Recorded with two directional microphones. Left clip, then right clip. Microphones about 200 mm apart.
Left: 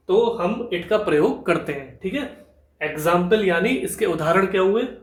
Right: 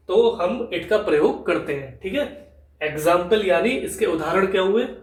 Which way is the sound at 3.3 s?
35° left (ahead or behind).